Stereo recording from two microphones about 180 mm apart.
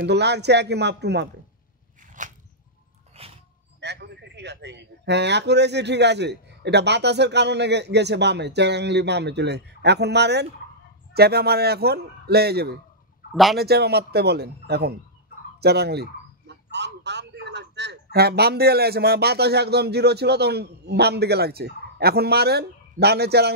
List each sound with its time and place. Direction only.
0.0 s a man's voice: 70° right (ahead or behind)
2.2 s a sound: 45° right (ahead or behind)
3.1 s a sound: 35° right (ahead or behind)
3.8 s a man's voice: 70° right (ahead or behind)
13.3 s speech: centre (ahead or behind)
13.6 s a man's voice: 60° right (ahead or behind)